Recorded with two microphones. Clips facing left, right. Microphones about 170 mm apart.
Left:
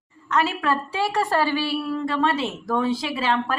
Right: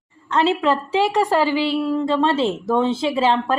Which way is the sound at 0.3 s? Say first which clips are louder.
Right 5 dB; 25° right (ahead or behind).